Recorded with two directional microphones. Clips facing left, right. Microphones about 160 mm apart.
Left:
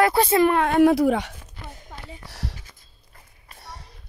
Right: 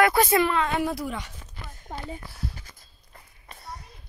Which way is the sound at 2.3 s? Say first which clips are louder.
Left 1 dB; 80° left.